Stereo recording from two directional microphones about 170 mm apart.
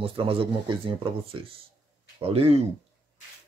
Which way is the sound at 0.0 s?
30° right (ahead or behind).